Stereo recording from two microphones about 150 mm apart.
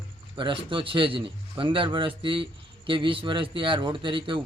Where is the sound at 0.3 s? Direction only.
35° right (ahead or behind).